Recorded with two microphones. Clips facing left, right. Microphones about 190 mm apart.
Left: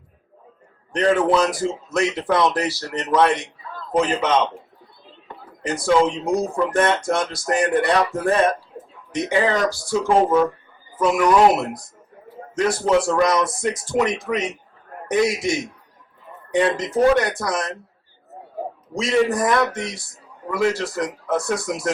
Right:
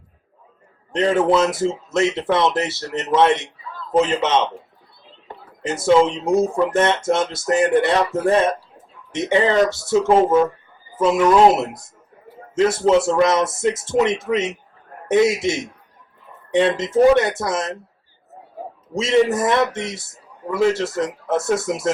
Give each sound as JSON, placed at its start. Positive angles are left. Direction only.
{"t": 0.9, "sound": "speech", "side_deg": -25}
{"t": 5.6, "sound": "speech", "side_deg": -25}
{"t": 18.9, "sound": "speech", "side_deg": -25}